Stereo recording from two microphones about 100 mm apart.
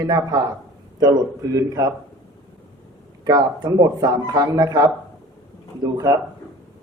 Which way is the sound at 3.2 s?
40° right (ahead or behind).